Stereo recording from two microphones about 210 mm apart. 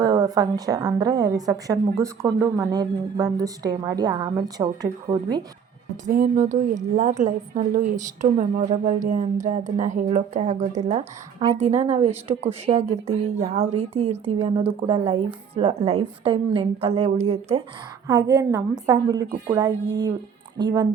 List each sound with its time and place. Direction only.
0.0 s a woman's voice: 15° right (ahead or behind)
6.1 s a woman's voice: 40° right (ahead or behind)
18.1 s a woman's voice: 15° right (ahead or behind)